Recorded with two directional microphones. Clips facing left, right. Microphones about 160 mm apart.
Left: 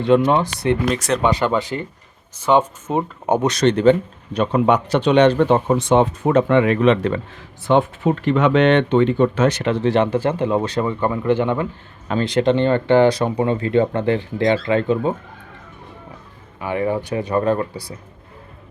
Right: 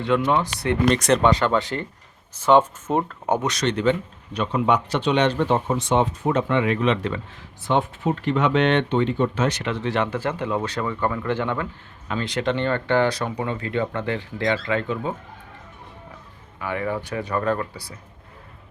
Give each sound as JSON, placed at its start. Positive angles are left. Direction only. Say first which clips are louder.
{"t": 0.1, "sound": "speech", "louder": "left 7 dB", "side_deg": 25}
{"t": 0.9, "sound": "speech", "louder": "right 1 dB", "side_deg": 0}
{"t": 2.9, "sound": "speech", "louder": "left 1 dB", "side_deg": 5}
{"t": 3.2, "sound": "speech", "louder": "left 7 dB", "side_deg": 20}
{"t": 3.5, "sound": "speech", "louder": "left 7 dB", "side_deg": 45}
{"t": 4.4, "sound": "speech", "louder": "left 5 dB", "side_deg": 50}
{"t": 7.7, "sound": "speech", "louder": "left 6 dB", "side_deg": 80}
{"t": 9.6, "sound": "speech", "louder": "left 7 dB", "side_deg": 35}
{"t": 12.0, "sound": "speech", "louder": "left 7 dB", "side_deg": 35}
{"t": 16.6, "sound": "speech", "louder": "left 5 dB", "side_deg": 20}